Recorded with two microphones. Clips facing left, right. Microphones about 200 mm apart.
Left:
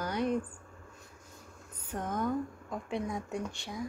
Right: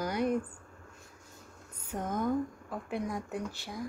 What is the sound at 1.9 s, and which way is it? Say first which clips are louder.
Speech: right 1 dB; 10° right (ahead or behind).